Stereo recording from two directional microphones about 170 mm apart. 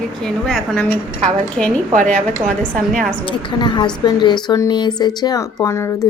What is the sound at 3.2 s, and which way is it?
A woman's voice, 30° left (ahead or behind).